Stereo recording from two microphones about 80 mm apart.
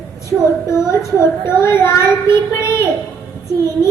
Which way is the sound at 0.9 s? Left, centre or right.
Left.